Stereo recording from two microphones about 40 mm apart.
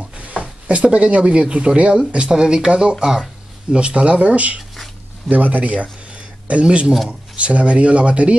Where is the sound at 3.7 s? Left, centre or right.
Right.